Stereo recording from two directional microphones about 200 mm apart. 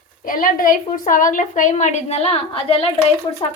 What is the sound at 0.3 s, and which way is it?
A woman's voice, 45° left (ahead or behind).